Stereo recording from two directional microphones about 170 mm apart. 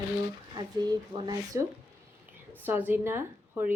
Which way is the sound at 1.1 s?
25° right (ahead or behind).